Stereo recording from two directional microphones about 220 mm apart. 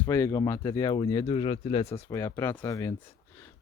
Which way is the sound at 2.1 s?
15° left (ahead or behind).